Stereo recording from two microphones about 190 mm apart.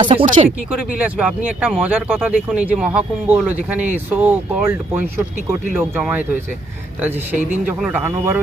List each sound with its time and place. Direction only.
0.0 s speech: 25° right (ahead or behind)
0.4 s speech: 10° right (ahead or behind)
7.8 s speech: 10° right (ahead or behind)